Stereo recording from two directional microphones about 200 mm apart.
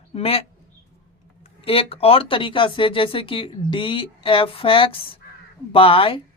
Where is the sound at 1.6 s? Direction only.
30° left (ahead or behind).